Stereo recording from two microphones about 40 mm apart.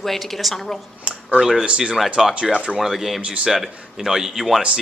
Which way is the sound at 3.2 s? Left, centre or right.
Right.